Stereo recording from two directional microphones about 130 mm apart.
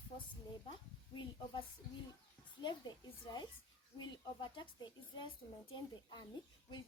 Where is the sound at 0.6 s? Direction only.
40° left (ahead or behind).